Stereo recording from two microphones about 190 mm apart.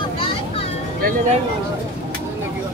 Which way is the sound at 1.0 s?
45° right (ahead or behind).